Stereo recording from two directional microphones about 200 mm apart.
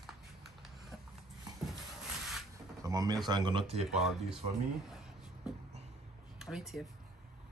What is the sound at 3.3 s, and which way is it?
Speech, 20° right (ahead or behind).